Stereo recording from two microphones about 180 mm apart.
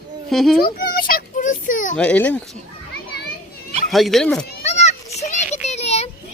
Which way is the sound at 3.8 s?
Centre (ahead or behind).